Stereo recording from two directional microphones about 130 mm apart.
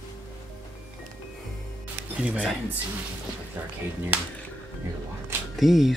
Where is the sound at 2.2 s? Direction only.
10° right (ahead or behind).